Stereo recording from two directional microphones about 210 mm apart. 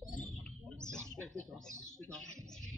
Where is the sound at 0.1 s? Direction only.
5° left (ahead or behind).